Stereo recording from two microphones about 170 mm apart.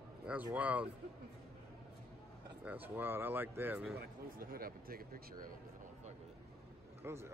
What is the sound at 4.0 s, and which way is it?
Speech, 60° right (ahead or behind).